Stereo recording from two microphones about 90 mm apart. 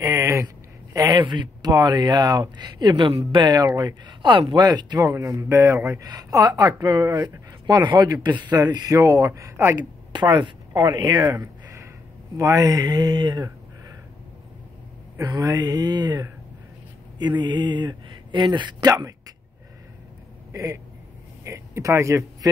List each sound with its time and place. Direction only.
0.0 s a sound: 35° right (ahead or behind)
0.9 s speech: 45° right (ahead or behind)
3.1 s speech: 75° right (ahead or behind)
3.5 s speech: 45° right (ahead or behind)
4.9 s speech: 35° right (ahead or behind)
10.1 s speech: 55° right (ahead or behind)
11.3 s a sound: 30° right (ahead or behind)
12.4 s speech: 40° right (ahead or behind)
15.2 s speech: 45° right (ahead or behind)
18.9 s speech: 40° right (ahead or behind)
20.5 s speech: 40° right (ahead or behind)